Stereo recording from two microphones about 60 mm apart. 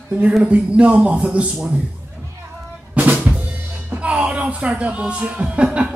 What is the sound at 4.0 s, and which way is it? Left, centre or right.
Speech, right.